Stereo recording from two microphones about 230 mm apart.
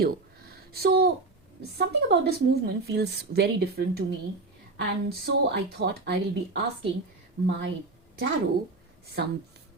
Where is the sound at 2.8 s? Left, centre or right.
Right.